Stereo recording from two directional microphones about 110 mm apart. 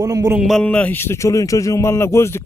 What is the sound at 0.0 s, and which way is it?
Speech, 35° right (ahead or behind).